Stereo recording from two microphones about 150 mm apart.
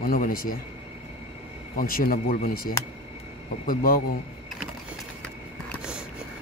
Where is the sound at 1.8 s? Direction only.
80° left.